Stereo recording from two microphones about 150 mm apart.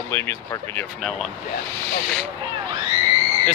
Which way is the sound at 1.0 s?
Centre (ahead or behind).